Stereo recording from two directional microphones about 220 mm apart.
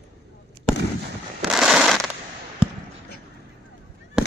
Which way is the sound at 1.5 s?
Centre (ahead or behind).